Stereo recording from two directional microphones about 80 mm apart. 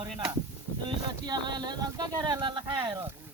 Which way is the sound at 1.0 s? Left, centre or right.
Right.